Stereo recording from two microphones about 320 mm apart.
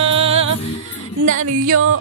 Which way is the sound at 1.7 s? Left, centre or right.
Right.